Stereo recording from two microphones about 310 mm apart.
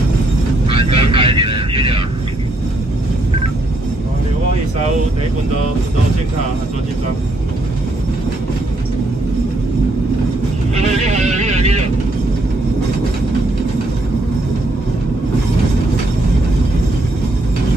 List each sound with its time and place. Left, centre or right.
0.7 s vehicle: centre
10.8 s vehicle: right